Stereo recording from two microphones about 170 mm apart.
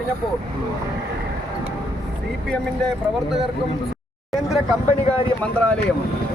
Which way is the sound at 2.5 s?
5° left (ahead or behind).